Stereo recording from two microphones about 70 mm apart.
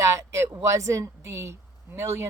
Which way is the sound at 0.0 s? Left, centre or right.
Right.